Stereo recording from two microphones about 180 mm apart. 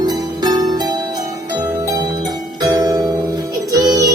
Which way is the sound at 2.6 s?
20° right (ahead or behind).